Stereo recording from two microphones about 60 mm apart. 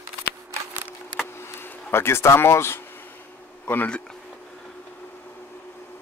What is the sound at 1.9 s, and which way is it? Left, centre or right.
Speech, left.